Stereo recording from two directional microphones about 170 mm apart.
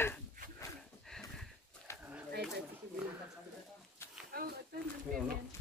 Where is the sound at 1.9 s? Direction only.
15° left (ahead or behind).